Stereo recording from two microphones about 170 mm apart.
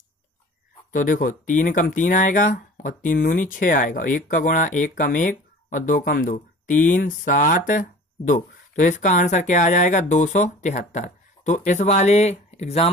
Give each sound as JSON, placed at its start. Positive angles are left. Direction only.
{"t": 0.9, "sound": "speech", "side_deg": 50}